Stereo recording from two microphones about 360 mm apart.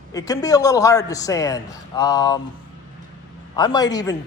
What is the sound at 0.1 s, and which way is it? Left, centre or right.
A man's voice, centre.